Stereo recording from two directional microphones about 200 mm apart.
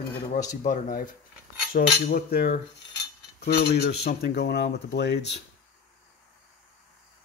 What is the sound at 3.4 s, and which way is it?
Speech, 55° left (ahead or behind).